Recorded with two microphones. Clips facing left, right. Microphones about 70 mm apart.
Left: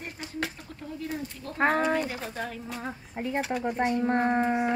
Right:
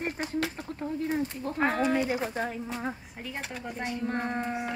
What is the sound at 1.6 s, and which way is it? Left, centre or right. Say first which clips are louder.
Speech: left 2 dB; left.